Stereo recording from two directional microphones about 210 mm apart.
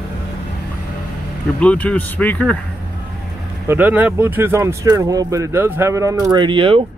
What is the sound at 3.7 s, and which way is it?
Speech, 10° right (ahead or behind).